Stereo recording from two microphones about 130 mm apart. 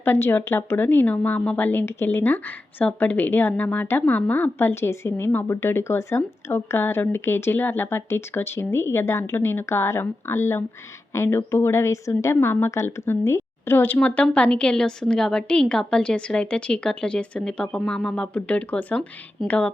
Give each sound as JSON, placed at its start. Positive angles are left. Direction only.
{"t": 0.0, "sound": "a woman's voice", "side_deg": 15}